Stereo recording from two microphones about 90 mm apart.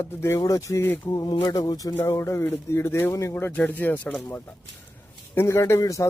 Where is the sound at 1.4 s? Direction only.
50° left (ahead or behind).